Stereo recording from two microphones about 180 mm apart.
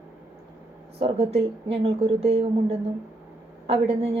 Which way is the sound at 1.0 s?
35° right (ahead or behind).